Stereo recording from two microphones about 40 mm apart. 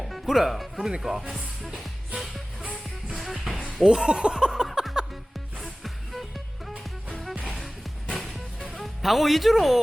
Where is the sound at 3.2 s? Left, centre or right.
Centre.